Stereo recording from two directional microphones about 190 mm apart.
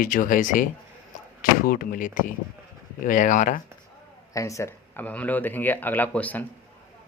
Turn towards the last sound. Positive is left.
turn(degrees=10)  # may be behind; listen again after turning